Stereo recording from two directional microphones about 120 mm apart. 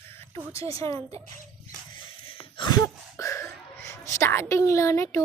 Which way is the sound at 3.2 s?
25° left (ahead or behind).